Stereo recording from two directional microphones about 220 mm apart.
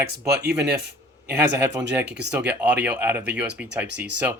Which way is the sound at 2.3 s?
5° right (ahead or behind).